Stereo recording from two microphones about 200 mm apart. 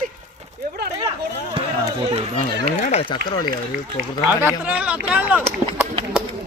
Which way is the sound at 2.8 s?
35° left (ahead or behind).